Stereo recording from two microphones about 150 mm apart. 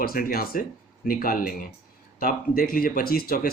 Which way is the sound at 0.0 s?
80° left.